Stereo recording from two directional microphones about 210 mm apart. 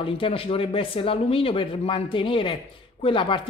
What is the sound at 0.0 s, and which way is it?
A woman's voice, 25° left (ahead or behind).